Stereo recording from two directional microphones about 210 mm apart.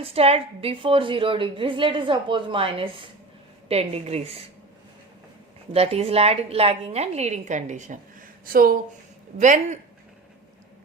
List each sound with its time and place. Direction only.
0.0 s a woman's voice: 30° right (ahead or behind)
5.7 s a woman's voice: 30° right (ahead or behind)